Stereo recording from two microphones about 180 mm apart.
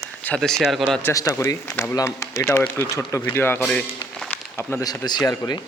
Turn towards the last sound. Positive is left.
turn(degrees=20)  # may be behind; listen again after turning